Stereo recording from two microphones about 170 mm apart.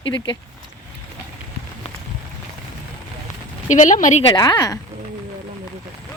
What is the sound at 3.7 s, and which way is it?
Speech, 45° left (ahead or behind).